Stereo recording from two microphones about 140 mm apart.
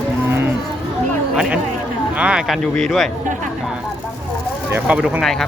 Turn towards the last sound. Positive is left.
turn(degrees=0)  # may be behind; listen again after turning